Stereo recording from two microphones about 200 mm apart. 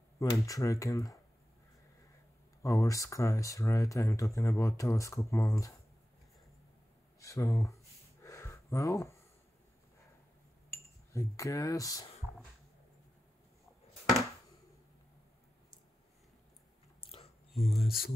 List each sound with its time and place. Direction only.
0.2 s speech: 15° left (ahead or behind)
2.6 s speech: 15° left (ahead or behind)
7.2 s a sound: 15° left (ahead or behind)
11.1 s speech: 15° left (ahead or behind)
17.0 s a sound: 25° left (ahead or behind)
17.6 s speech: centre (ahead or behind)